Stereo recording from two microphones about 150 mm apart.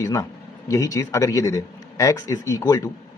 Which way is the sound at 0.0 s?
20° left (ahead or behind).